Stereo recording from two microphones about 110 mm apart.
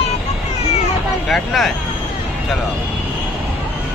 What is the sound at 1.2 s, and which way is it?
Speech, centre (ahead or behind).